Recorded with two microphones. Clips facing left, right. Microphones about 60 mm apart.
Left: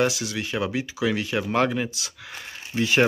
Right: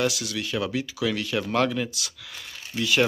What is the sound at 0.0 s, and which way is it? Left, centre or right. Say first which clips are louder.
Speech: left 2 dB; left.